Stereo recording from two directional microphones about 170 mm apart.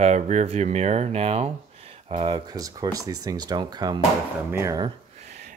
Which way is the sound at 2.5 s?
20° right (ahead or behind).